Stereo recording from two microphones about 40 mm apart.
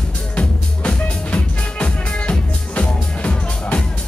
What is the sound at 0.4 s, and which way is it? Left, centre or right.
Music, left.